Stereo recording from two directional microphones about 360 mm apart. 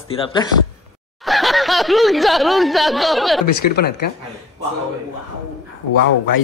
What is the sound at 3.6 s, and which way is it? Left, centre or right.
Speech, left.